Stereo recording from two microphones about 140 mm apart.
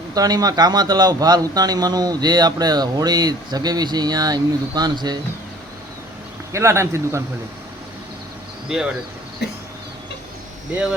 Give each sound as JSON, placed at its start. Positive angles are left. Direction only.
{"t": 0.1, "sound": "speech", "side_deg": -25}
{"t": 6.5, "sound": "speech", "side_deg": -20}